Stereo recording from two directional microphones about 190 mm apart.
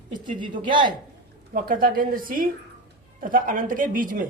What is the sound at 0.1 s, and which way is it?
Speech, 25° right (ahead or behind).